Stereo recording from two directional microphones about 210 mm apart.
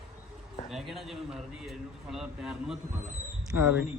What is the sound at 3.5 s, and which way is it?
Speech, 10° right (ahead or behind).